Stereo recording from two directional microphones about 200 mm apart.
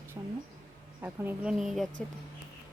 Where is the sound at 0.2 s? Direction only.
20° right (ahead or behind).